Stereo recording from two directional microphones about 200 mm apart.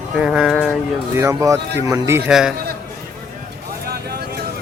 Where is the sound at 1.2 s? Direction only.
15° right (ahead or behind).